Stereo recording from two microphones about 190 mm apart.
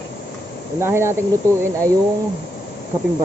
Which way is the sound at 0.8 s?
15° right (ahead or behind).